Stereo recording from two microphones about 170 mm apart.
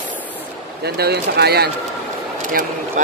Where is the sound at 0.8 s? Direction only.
70° right (ahead or behind).